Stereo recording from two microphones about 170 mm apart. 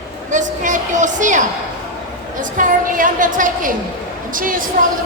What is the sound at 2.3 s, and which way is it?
A woman's voice, 50° right (ahead or behind).